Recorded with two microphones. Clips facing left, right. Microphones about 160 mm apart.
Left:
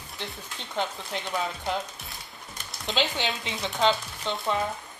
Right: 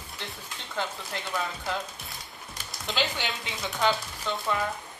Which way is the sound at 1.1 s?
20° left (ahead or behind).